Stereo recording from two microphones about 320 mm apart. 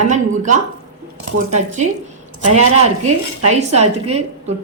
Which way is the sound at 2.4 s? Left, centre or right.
Right.